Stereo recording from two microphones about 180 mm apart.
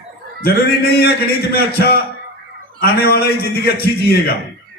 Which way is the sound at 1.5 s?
60° left (ahead or behind).